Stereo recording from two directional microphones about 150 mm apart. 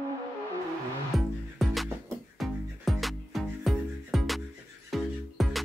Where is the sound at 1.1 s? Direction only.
Centre (ahead or behind).